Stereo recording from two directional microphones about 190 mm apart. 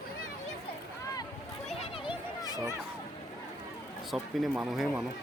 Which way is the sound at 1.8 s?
25° left (ahead or behind).